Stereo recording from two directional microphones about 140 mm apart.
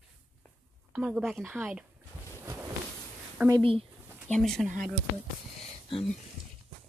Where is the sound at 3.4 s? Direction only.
15° right (ahead or behind).